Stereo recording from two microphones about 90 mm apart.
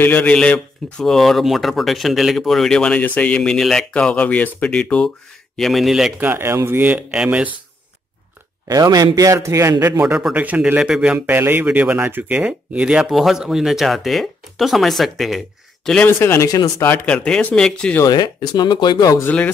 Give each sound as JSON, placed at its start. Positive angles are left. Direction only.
{"t": 0.0, "sound": "speech", "side_deg": 15}
{"t": 5.6, "sound": "speech", "side_deg": 0}
{"t": 6.1, "sound": "speech", "side_deg": -20}
{"t": 8.6, "sound": "a man's voice", "side_deg": -45}
{"t": 10.3, "sound": "speech", "side_deg": -15}
{"t": 11.1, "sound": "speech", "side_deg": -20}
{"t": 16.1, "sound": "speech", "side_deg": 30}
{"t": 16.4, "sound": "speech", "side_deg": 40}
{"t": 17.0, "sound": "speech", "side_deg": 10}
{"t": 18.0, "sound": "speech", "side_deg": 45}
{"t": 19.2, "sound": "speech", "side_deg": 15}